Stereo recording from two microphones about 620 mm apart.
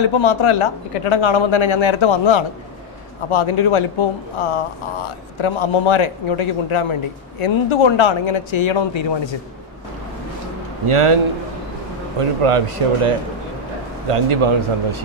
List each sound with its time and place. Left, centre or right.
0.0 s a man's voice: left
10.9 s speech: right
12.2 s speech: right
14.1 s speech: right